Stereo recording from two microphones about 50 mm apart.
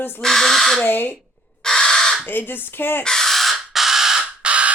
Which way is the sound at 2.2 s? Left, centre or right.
Left.